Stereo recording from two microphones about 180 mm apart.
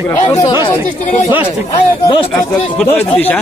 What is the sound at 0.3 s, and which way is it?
Speech, 20° left (ahead or behind).